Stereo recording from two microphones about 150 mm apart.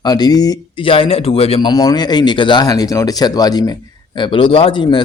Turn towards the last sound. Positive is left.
turn(degrees=30)  # may be behind; listen again after turning